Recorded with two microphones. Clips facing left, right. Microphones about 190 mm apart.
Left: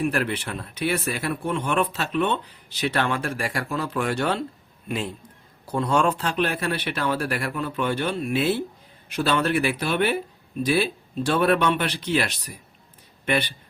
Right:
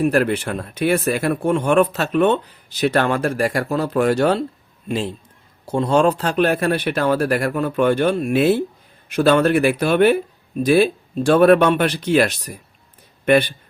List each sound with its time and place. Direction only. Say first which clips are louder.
0.0 s speech: right 7 dB; 45° right (ahead or behind)
4.9 s a man's voice: right 5 dB; 30° right (ahead or behind); by 13.5 s 50° right (ahead or behind)